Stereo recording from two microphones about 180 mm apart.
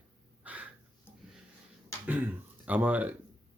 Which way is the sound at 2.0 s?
10° right (ahead or behind).